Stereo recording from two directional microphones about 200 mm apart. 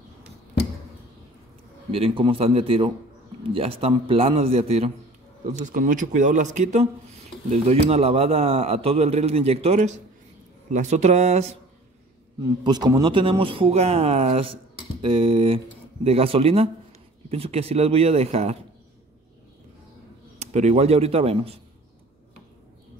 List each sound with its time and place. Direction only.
1.9 s a man's voice: 30° right (ahead or behind)
12.4 s a man's voice: 20° right (ahead or behind)
20.3 s a man's voice: 35° right (ahead or behind)